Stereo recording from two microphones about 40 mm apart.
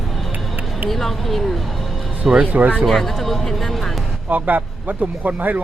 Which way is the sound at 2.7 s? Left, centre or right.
Centre.